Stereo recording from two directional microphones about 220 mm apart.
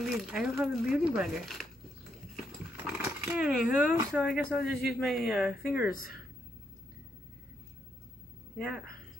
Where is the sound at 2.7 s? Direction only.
5° right (ahead or behind).